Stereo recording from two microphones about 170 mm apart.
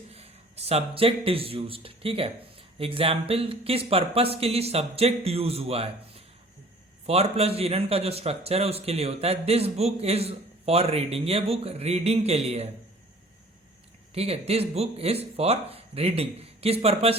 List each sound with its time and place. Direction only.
0.1 s a man's voice: 35° right (ahead or behind)
14.1 s a man's voice: 35° right (ahead or behind)